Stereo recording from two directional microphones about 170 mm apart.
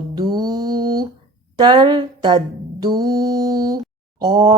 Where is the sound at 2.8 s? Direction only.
20° right (ahead or behind).